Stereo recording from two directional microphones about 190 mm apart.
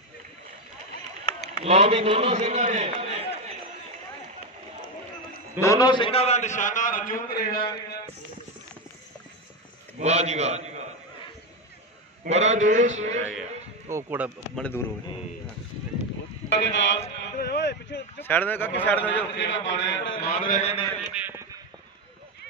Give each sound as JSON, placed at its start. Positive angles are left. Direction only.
{"t": 1.6, "sound": "a man's voice", "side_deg": -35}
{"t": 5.6, "sound": "a man's voice", "side_deg": 20}
{"t": 9.9, "sound": "a man's voice", "side_deg": -35}
{"t": 12.3, "sound": "a man's voice", "side_deg": -35}
{"t": 13.8, "sound": "speech", "side_deg": -10}
{"t": 14.6, "sound": "speech", "side_deg": 10}
{"t": 16.4, "sound": "speech", "side_deg": 65}
{"t": 17.4, "sound": "a sound", "side_deg": 60}
{"t": 18.2, "sound": "speech", "side_deg": 10}
{"t": 19.3, "sound": "a man's voice", "side_deg": 70}
{"t": 20.2, "sound": "a man's voice", "side_deg": 45}
{"t": 21.1, "sound": "a sound", "side_deg": -10}